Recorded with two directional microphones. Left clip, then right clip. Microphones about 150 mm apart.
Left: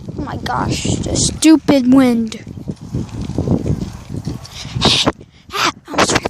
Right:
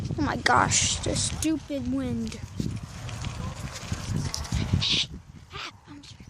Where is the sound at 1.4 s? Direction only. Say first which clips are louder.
Left 18 dB; 55° left (ahead or behind).